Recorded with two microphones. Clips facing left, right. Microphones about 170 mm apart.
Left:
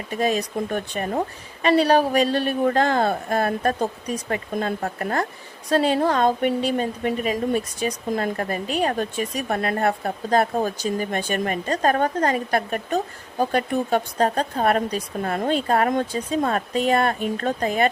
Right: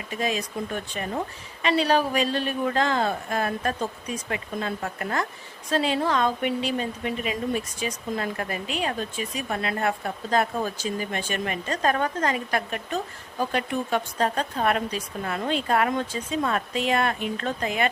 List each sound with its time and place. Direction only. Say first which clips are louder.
0.1 s speech: left 5 dB; 40° left (ahead or behind)